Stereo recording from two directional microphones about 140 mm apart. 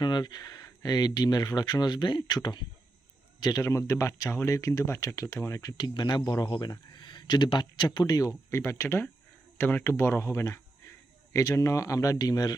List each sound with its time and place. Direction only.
0.0 s speech: 30° left (ahead or behind)